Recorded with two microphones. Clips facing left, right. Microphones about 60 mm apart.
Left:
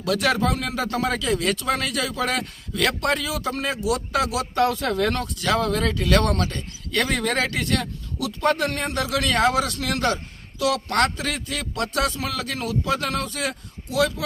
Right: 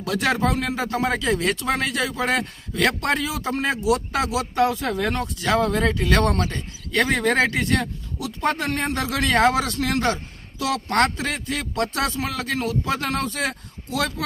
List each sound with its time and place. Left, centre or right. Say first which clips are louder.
0.0 s speech: even; right
4.6 s speech: left 1 dB; centre
5.2 s speech: right 2 dB; right